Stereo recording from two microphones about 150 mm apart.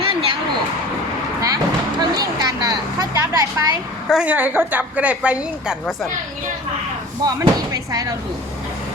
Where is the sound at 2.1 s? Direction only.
25° right (ahead or behind).